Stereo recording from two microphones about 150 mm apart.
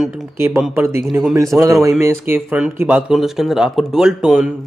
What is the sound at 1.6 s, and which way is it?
A man's voice, 20° right (ahead or behind).